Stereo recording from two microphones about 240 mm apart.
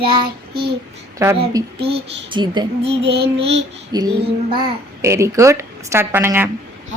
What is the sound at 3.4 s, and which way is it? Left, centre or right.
A child's voice, right.